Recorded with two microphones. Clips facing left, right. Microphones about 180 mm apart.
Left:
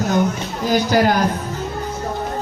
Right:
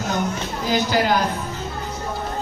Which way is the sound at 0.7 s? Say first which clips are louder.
Left 4 dB; 45° left (ahead or behind).